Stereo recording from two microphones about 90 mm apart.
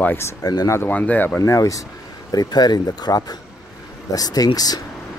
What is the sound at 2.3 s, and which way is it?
Speech, 50° left (ahead or behind).